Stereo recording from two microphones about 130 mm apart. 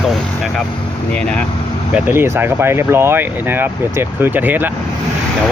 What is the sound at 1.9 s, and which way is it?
Speech, 15° right (ahead or behind).